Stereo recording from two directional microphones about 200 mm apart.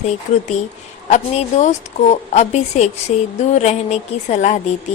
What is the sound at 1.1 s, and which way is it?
A woman's voice, 35° left (ahead or behind).